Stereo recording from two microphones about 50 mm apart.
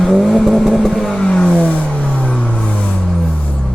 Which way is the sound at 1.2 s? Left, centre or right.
Centre.